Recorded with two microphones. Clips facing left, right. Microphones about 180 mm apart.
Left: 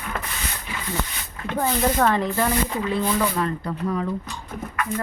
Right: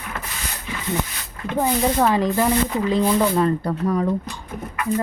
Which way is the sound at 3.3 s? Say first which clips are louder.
Right 6 dB; 35° right (ahead or behind).